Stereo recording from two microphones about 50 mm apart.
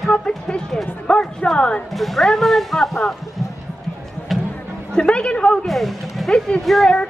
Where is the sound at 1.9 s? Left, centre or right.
Centre.